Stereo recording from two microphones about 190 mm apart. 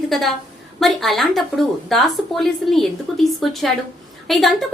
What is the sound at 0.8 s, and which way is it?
A woman's voice, centre (ahead or behind).